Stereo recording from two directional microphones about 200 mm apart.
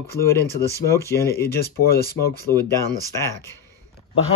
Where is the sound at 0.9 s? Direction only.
15° left (ahead or behind).